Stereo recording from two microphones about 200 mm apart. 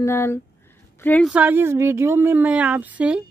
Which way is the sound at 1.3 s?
10° right (ahead or behind).